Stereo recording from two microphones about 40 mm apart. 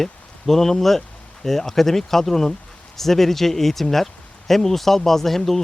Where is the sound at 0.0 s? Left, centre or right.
Centre.